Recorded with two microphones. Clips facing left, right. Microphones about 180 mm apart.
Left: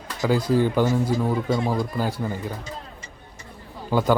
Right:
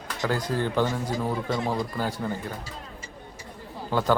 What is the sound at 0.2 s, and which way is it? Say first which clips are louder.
Speech: left 7 dB; 10° left (ahead or behind).